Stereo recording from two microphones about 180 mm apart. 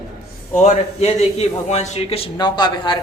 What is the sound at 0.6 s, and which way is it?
A man's voice, 35° left (ahead or behind).